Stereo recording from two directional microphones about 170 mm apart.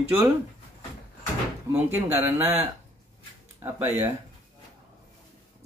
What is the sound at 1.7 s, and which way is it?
Speech, 10° right (ahead or behind).